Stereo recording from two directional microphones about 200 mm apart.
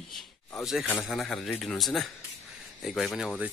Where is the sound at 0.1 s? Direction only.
10° left (ahead or behind).